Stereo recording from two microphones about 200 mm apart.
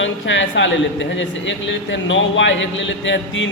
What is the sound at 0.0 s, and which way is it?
A man's voice, 70° left (ahead or behind).